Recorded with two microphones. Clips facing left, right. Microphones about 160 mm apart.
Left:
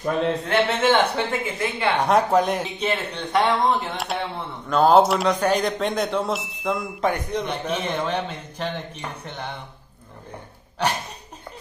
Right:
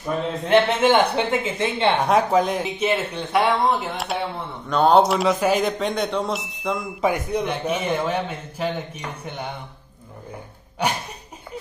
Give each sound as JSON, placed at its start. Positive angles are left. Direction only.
{"t": 0.5, "sound": "speech", "side_deg": -10}
{"t": 2.0, "sound": "speech", "side_deg": 0}
{"t": 7.1, "sound": "a man's voice", "side_deg": -10}
{"t": 10.8, "sound": "a man's voice", "side_deg": -10}